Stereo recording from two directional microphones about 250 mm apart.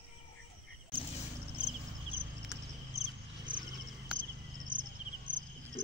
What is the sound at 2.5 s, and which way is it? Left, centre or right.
Cricket, centre.